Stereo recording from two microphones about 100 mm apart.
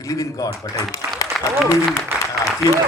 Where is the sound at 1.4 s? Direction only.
Centre (ahead or behind).